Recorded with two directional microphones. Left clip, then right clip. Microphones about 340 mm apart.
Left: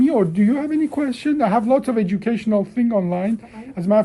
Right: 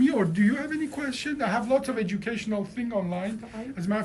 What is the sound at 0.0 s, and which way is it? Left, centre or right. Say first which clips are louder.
Speech: left 7 dB; centre.